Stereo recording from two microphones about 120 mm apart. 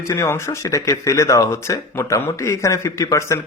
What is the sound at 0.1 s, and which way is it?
Speech, 20° left (ahead or behind).